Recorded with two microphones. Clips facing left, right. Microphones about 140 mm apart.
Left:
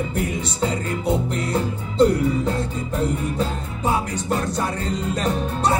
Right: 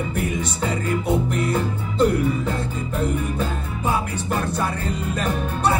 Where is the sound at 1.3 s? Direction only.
35° left (ahead or behind).